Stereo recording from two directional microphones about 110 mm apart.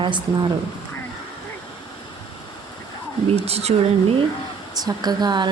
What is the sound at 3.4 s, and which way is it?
Speech, 70° right (ahead or behind).